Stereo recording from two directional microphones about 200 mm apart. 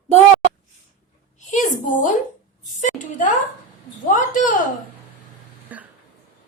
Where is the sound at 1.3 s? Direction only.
40° left (ahead or behind).